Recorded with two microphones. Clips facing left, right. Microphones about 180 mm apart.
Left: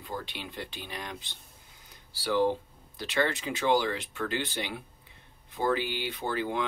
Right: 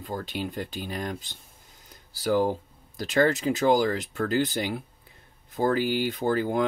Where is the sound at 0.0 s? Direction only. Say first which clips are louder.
Right 6 dB; 45° right (ahead or behind).